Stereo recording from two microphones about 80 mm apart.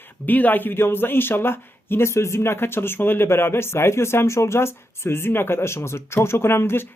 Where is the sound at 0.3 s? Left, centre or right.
Left.